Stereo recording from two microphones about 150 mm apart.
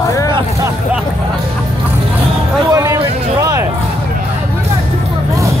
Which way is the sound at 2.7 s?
20° right (ahead or behind).